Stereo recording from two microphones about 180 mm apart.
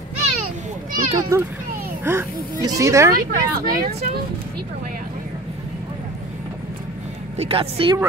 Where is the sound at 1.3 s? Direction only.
15° right (ahead or behind).